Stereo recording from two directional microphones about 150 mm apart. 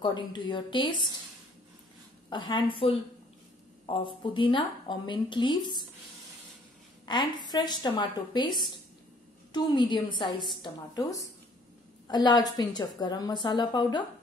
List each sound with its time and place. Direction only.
0.0 s speech: 30° left (ahead or behind)
2.2 s speech: 30° left (ahead or behind)
7.1 s a woman's voice: 30° left (ahead or behind)